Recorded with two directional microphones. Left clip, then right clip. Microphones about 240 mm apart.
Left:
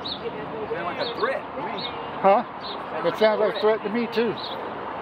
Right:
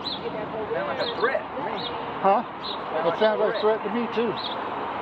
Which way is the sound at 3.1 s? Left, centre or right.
Centre.